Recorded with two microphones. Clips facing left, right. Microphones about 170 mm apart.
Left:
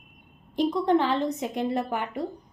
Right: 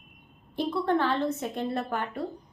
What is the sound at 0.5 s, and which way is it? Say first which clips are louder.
A woman's voice: left 4 dB; 15° left (ahead or behind).